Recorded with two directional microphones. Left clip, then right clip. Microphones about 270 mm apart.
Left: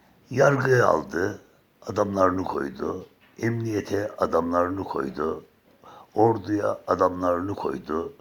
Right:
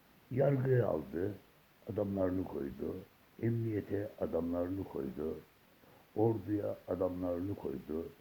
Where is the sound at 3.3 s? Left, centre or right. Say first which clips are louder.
Left 10 dB; left.